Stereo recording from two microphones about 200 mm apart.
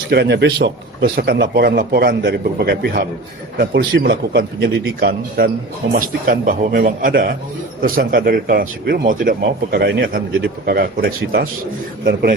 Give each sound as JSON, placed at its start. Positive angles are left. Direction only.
{"t": 0.1, "sound": "a man's voice", "side_deg": -55}